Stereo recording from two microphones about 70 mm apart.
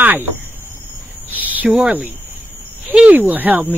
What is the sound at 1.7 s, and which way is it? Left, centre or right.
Speech, centre.